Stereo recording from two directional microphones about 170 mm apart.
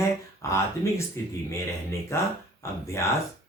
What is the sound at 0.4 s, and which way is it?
Speech, 15° left (ahead or behind).